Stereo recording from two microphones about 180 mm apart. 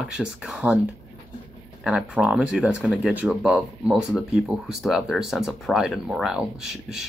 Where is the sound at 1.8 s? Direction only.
5° right (ahead or behind).